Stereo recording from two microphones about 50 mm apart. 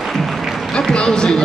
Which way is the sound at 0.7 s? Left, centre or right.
Centre.